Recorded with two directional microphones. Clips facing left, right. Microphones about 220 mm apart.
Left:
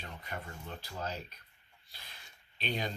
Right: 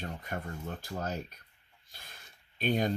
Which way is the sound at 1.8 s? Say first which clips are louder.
Right 2 dB; 50° right (ahead or behind).